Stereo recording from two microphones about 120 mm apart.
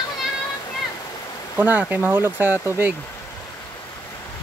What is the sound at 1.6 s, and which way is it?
Speech, 15° right (ahead or behind).